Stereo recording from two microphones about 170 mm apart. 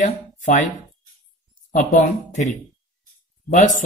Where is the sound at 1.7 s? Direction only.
50° left (ahead or behind).